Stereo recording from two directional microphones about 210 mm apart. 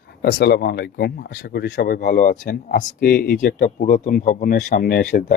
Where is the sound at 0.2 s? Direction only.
50° left (ahead or behind).